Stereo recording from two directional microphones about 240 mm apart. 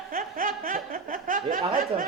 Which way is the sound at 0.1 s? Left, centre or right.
Right.